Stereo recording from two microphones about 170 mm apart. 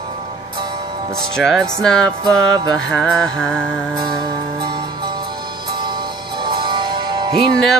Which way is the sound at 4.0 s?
25° right (ahead or behind).